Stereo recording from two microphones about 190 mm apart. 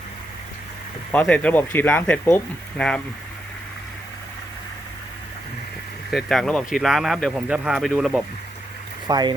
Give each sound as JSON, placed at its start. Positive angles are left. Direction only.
{"t": 1.1, "sound": "speech", "side_deg": 5}
{"t": 6.1, "sound": "speech", "side_deg": 0}
{"t": 9.0, "sound": "speech", "side_deg": -20}